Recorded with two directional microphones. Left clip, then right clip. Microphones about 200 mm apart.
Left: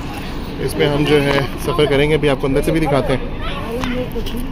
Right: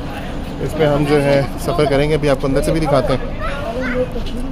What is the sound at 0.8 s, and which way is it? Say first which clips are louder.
Speech: even; 10° right (ahead or behind).